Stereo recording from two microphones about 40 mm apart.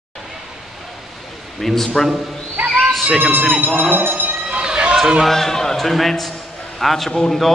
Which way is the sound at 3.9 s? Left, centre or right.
Right.